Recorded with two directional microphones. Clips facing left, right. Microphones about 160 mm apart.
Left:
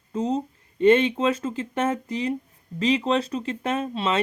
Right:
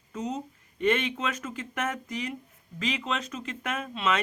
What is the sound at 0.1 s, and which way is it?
Speech, 30° left (ahead or behind).